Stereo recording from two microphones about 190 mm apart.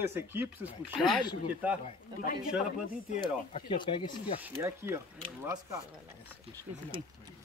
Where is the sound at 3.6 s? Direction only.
25° left (ahead or behind).